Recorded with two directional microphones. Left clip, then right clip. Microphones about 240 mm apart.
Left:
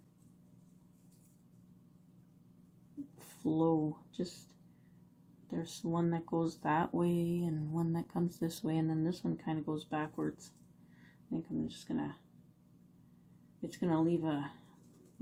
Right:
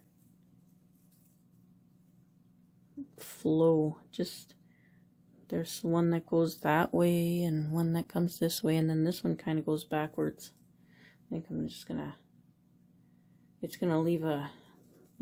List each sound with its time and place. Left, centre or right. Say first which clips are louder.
3.2 s speech: right 6 dB; right
5.5 s speech: right 6 dB; right
13.6 s speech: right 2 dB; right